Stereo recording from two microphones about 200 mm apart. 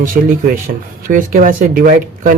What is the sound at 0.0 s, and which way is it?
Speech, 45° right (ahead or behind).